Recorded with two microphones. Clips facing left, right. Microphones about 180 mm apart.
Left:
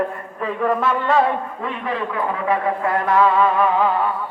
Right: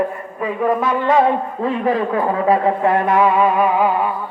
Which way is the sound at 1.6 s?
40° right (ahead or behind).